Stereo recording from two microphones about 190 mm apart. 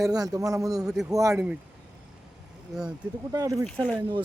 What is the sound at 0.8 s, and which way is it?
Speech, 5° right (ahead or behind).